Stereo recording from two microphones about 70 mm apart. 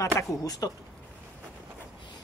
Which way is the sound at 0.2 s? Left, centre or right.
Left.